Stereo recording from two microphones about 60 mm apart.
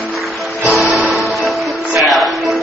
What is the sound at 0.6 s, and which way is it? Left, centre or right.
Music, centre.